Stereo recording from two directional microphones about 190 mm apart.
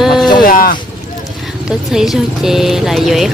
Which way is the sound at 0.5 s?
50° left (ahead or behind).